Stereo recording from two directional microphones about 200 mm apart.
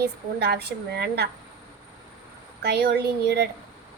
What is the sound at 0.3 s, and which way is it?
Speech, 55° right (ahead or behind).